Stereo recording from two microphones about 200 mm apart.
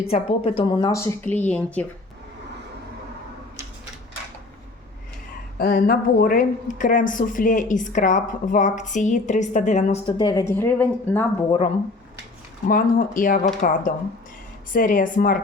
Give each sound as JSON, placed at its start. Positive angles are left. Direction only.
{"t": 0.0, "sound": "a woman's voice", "side_deg": 30}
{"t": 5.5, "sound": "a woman's voice", "side_deg": 45}
{"t": 12.6, "sound": "a woman's voice", "side_deg": 45}